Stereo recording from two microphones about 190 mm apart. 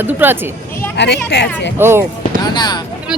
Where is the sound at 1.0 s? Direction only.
60° left (ahead or behind).